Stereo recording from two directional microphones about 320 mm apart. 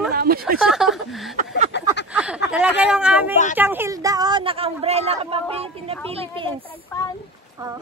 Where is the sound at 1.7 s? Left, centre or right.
Left.